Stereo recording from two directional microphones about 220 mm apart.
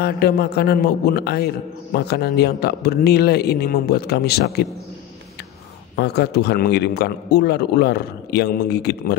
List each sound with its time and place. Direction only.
0.0 s a man's voice: 45° left (ahead or behind)
5.9 s a man's voice: 45° left (ahead or behind)